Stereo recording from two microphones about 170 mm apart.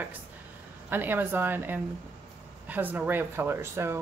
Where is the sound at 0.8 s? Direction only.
10° right (ahead or behind).